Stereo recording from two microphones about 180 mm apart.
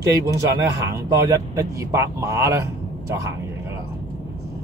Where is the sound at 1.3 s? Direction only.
15° right (ahead or behind).